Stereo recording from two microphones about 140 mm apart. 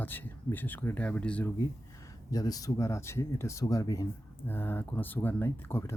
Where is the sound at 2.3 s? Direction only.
25° left (ahead or behind).